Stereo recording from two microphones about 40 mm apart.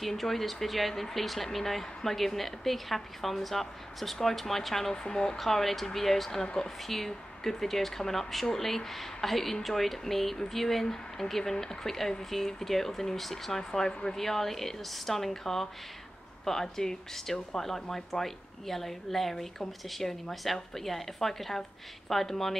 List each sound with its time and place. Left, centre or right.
0.0 s a woman's voice: centre
5.4 s a woman's voice: centre
6.4 s a woman's voice: centre